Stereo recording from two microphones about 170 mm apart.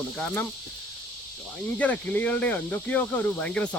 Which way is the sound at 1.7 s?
10° left (ahead or behind).